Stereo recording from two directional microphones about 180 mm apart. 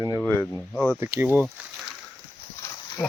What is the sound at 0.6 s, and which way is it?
Speech, 5° left (ahead or behind).